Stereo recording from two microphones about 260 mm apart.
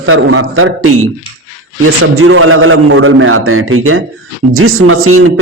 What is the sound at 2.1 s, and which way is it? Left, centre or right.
A man's voice, right.